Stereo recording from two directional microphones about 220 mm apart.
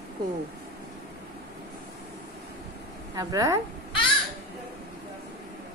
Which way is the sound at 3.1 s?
15° right (ahead or behind).